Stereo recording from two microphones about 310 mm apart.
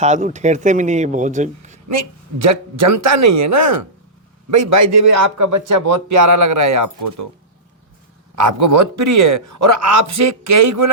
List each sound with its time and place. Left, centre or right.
0.0 s speech: right
2.4 s a man's voice: right
8.4 s a man's voice: right